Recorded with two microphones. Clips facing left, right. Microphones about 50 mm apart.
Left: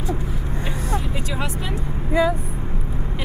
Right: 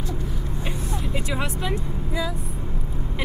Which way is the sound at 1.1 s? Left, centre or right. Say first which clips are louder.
Even; centre.